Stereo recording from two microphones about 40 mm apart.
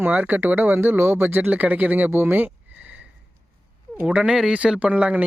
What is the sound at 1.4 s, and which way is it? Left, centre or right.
Speech, right.